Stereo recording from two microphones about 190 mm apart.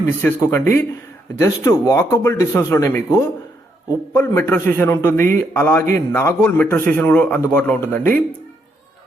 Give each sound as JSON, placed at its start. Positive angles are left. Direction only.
{"t": 0.2, "sound": "a man's voice", "side_deg": 10}